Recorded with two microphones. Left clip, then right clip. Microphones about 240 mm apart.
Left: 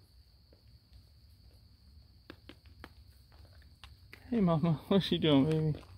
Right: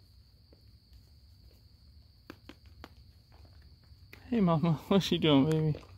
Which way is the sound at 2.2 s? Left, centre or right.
Centre.